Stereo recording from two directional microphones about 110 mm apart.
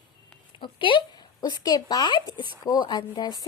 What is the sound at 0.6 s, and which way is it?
Speech, 50° left (ahead or behind).